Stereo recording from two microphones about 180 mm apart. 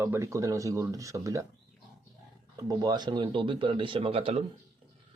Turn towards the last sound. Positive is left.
turn(degrees=-30)  # may be behind; listen again after turning